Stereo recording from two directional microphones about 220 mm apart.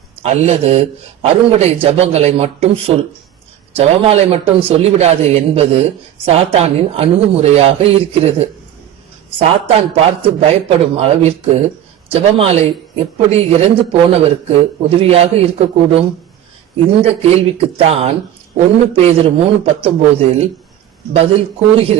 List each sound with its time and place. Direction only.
0.2 s a man's voice: 30° right (ahead or behind)